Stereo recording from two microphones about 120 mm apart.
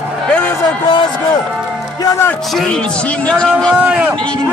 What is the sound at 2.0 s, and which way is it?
Speech, 20° left (ahead or behind).